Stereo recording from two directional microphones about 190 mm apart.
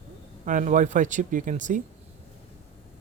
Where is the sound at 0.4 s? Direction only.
40° right (ahead or behind).